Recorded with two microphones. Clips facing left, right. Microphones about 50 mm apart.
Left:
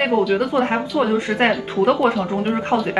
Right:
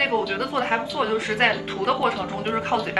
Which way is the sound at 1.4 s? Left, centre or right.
Left.